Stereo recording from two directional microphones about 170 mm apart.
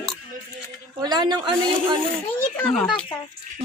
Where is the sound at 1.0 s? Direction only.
25° right (ahead or behind).